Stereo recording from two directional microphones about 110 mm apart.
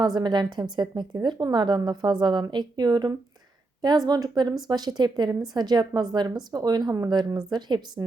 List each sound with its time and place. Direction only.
0.0 s a woman's voice: 40° right (ahead or behind)